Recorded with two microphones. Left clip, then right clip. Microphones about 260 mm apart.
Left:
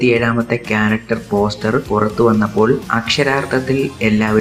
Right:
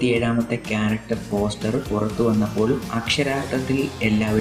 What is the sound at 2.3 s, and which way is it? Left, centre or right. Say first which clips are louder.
Speech: left 8 dB; centre.